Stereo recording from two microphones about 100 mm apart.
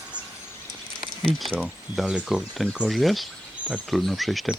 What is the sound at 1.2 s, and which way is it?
Speech, 5° left (ahead or behind).